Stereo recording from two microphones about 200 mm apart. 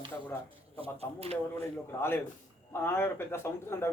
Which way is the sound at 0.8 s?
30° right (ahead or behind).